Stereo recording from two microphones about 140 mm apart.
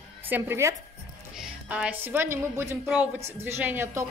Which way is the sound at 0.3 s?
20° right (ahead or behind).